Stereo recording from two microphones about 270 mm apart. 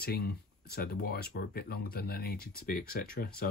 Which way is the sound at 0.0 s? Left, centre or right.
Left.